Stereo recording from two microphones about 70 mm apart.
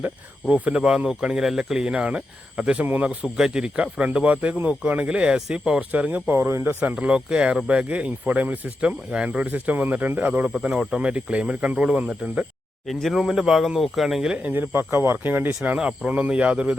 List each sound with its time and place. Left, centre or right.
0.4 s speech: centre
3.3 s speech: centre
5.9 s speech: right
6.4 s speech: right
7.0 s speech: centre
10.6 s speech: centre
12.9 s speech: centre
14.4 s speech: right
15.3 s speech: right